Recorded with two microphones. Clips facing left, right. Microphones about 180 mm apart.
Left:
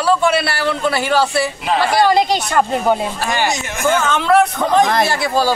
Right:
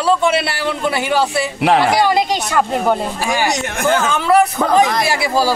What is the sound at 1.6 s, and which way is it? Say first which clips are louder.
Speech: right 7 dB; 65° right (ahead or behind).